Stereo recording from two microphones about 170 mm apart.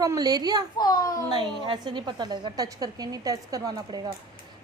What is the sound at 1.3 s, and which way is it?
A woman's voice, 25° right (ahead or behind).